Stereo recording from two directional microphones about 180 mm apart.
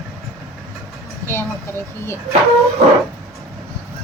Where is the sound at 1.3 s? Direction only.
15° left (ahead or behind).